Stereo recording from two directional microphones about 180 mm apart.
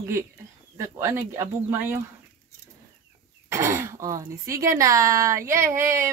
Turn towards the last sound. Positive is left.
turn(degrees=-15)  # may be behind; listen again after turning